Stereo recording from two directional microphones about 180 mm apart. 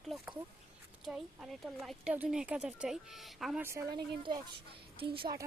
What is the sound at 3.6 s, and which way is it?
Speech, 15° right (ahead or behind).